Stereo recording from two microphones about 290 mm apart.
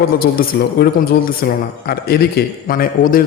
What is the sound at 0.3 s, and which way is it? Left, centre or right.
A man's voice, left.